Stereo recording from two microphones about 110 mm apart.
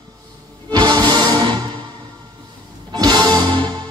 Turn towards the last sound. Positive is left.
turn(degrees=-40)  # may be behind; listen again after turning